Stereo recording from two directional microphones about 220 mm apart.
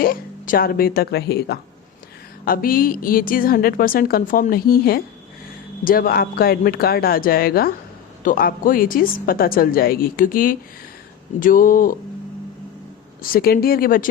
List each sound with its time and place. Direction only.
0.0 s a woman's voice: 40° left (ahead or behind)
13.2 s a woman's voice: 40° left (ahead or behind)